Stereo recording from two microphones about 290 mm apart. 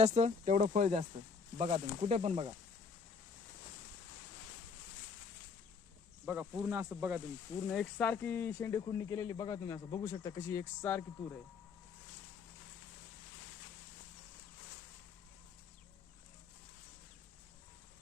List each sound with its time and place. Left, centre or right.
0.0 s speech: right
6.2 s speech: centre